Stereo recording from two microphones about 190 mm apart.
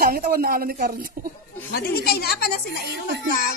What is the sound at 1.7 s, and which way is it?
A woman's voice, 55° left (ahead or behind).